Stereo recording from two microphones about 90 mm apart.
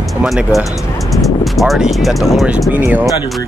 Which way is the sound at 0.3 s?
Centre (ahead or behind).